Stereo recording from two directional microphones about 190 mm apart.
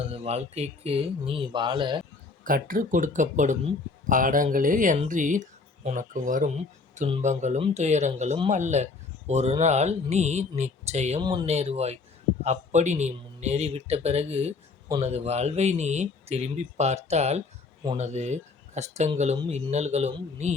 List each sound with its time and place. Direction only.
0.0 s speech: 30° right (ahead or behind)
2.4 s speech: 45° right (ahead or behind)
11.2 s speech: 25° right (ahead or behind)
11.4 s speech: 35° right (ahead or behind)